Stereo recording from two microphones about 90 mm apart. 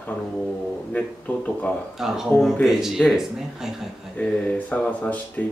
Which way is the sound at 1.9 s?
5° right (ahead or behind).